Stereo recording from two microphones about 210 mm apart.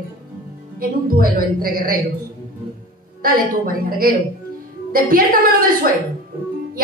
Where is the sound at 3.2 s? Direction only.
45° right (ahead or behind).